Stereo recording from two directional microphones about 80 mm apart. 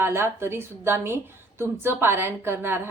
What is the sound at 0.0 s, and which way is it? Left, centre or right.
Speech, right.